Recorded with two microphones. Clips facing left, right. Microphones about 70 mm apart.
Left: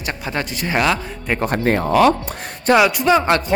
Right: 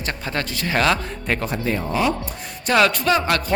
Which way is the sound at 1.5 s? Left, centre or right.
Left.